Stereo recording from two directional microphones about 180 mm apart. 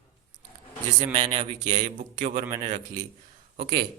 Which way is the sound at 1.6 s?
45° right (ahead or behind).